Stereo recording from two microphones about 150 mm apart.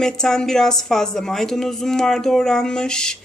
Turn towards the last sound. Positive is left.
turn(degrees=5)  # may be behind; listen again after turning